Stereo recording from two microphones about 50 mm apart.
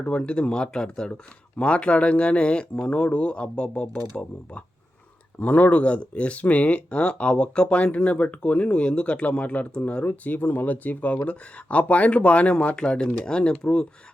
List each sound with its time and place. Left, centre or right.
0.0 s speech: left